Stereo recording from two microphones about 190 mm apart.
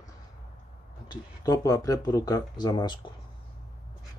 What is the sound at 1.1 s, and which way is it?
Speech, 20° left (ahead or behind).